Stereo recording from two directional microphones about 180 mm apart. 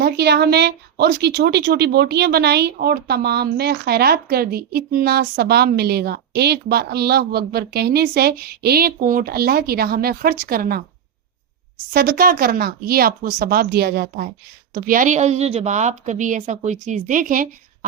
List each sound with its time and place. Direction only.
0.0 s a woman's voice: 65° right (ahead or behind)
11.9 s a woman's voice: 55° right (ahead or behind)